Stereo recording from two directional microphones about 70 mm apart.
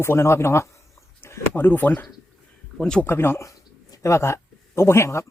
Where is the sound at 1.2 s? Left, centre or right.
Left.